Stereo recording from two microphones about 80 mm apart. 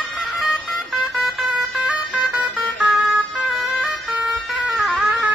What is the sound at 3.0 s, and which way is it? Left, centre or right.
Emergency vehicle, centre.